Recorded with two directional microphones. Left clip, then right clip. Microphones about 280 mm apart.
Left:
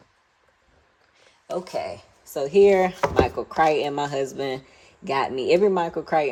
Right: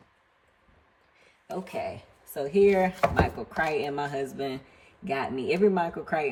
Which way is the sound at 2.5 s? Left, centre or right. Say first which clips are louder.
Left 5 dB; centre.